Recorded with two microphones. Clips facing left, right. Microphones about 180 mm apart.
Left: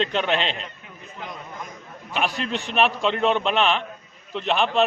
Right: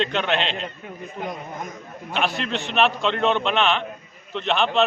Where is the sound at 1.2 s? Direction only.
45° right (ahead or behind).